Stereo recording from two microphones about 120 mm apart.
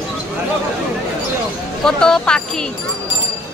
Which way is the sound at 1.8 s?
5° left (ahead or behind).